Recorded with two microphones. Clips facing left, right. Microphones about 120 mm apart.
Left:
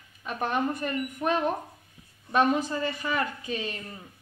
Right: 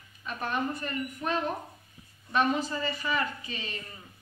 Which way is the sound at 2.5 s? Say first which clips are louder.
Left 3 dB; 50° left (ahead or behind).